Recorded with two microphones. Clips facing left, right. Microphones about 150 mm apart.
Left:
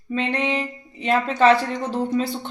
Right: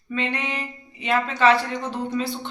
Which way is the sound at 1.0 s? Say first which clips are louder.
Left 3 dB; 40° left (ahead or behind).